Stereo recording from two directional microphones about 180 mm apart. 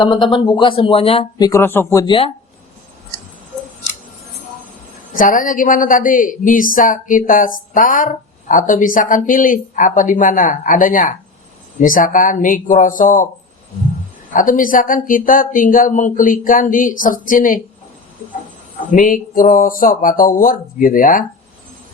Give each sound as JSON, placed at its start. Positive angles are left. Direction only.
{"t": 0.0, "sound": "speech", "side_deg": 25}
{"t": 1.5, "sound": "speech", "side_deg": 15}
{"t": 5.1, "sound": "speech", "side_deg": 50}
{"t": 14.3, "sound": "speech", "side_deg": 50}
{"t": 18.9, "sound": "speech", "side_deg": 45}